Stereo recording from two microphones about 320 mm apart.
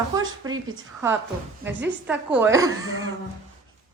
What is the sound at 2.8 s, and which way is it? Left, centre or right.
Cough, right.